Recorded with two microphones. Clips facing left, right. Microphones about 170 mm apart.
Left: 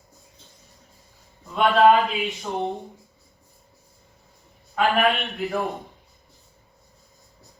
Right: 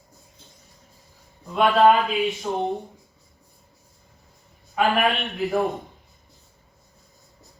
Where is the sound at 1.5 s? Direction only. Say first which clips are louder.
Even; centre (ahead or behind).